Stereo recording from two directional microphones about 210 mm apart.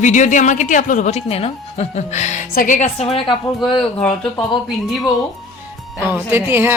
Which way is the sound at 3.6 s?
Centre (ahead or behind).